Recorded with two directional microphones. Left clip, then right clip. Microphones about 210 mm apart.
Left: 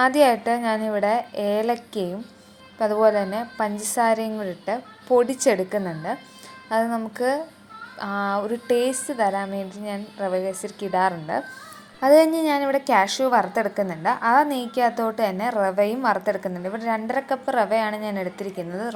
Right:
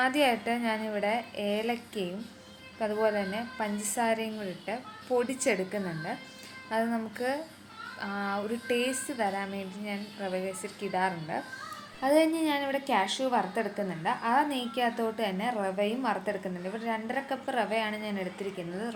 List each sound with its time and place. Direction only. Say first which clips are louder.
0.0 s a woman's voice: left 9 dB; 30° left (ahead or behind)
7.9 s a woman's voice: left 9 dB; 30° left (ahead or behind)